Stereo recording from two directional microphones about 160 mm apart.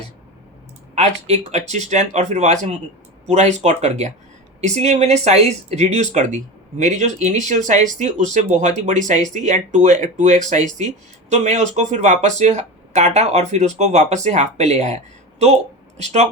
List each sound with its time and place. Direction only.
0.9 s speech: 45° right (ahead or behind)